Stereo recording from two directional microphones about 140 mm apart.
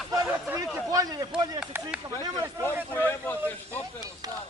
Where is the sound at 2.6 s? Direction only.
15° left (ahead or behind).